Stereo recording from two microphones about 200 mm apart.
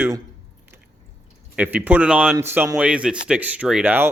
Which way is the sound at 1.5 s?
10° right (ahead or behind).